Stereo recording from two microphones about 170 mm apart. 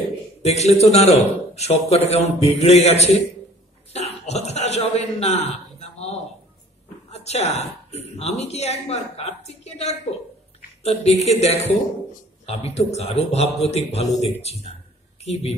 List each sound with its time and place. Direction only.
0.4 s a man's voice: 40° left (ahead or behind)